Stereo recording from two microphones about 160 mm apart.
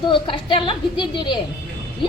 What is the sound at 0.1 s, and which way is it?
A child's voice, 30° left (ahead or behind).